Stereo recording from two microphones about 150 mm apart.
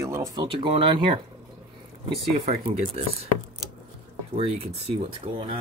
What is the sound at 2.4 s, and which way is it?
Speech, 45° right (ahead or behind).